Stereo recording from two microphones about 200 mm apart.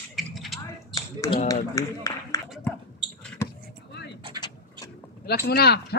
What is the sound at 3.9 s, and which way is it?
Vehicle, 55° left (ahead or behind).